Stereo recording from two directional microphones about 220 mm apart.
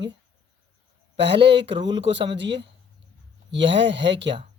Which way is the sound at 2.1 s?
55° right (ahead or behind).